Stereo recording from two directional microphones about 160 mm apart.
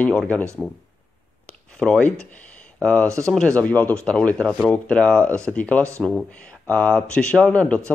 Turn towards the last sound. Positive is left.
turn(degrees=10)  # may be behind; listen again after turning